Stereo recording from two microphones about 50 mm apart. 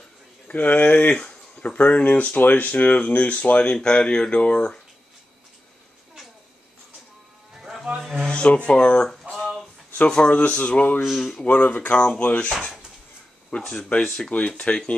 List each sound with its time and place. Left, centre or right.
0.5 s speech: left
7.5 s music: centre
8.3 s speech: left
11.0 s speech: centre
11.2 s speech: left
13.6 s speech: centre
14.6 s speech: left